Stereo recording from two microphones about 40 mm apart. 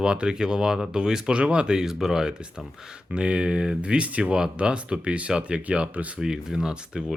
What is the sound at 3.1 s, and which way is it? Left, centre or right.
Speech, right.